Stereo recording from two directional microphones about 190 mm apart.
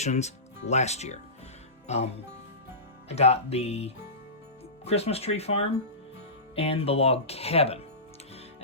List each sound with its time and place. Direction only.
0.0 s speech: 35° left (ahead or behind)
3.1 s speech: 35° left (ahead or behind)